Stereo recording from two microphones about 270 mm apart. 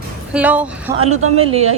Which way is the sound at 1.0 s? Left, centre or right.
Right.